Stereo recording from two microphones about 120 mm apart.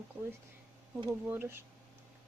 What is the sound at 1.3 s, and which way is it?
Speech, 20° right (ahead or behind).